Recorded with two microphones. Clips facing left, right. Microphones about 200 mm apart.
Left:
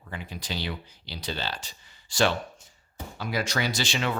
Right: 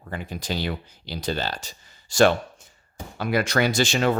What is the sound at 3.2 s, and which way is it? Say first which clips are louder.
Speech: right 7 dB; 60° right (ahead or behind).